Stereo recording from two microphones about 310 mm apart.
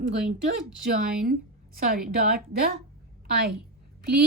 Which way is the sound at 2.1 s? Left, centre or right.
Right.